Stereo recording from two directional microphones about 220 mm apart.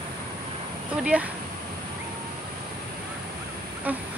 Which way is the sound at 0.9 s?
5° right (ahead or behind).